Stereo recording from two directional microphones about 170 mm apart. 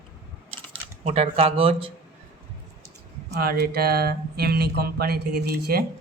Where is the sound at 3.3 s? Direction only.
65° right (ahead or behind).